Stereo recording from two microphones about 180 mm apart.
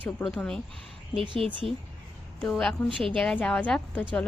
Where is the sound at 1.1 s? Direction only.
30° right (ahead or behind).